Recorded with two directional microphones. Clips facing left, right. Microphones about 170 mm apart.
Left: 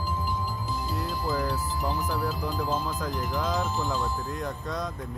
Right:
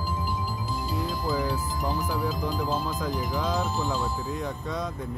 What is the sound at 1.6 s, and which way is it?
Speech, 15° right (ahead or behind).